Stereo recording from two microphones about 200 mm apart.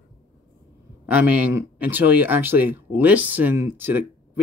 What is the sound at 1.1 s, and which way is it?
Speech, 10° right (ahead or behind).